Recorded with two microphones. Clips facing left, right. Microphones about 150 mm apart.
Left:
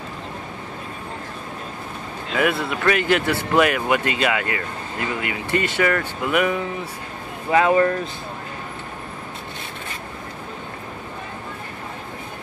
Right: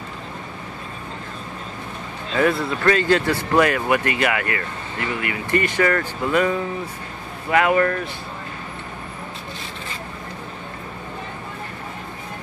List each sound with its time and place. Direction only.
2.3 s speech: 10° left (ahead or behind)